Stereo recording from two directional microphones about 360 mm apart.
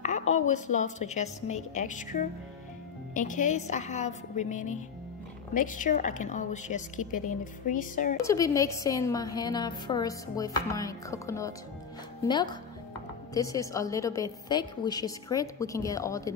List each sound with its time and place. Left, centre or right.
0.3 s a woman's voice: centre
8.2 s a woman's voice: centre